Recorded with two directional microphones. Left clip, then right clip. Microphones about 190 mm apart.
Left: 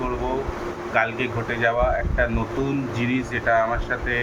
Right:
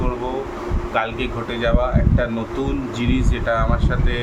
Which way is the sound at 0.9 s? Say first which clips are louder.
Even; 20° right (ahead or behind).